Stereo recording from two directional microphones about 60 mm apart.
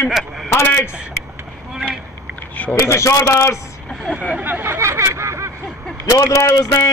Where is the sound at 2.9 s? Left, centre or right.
Left.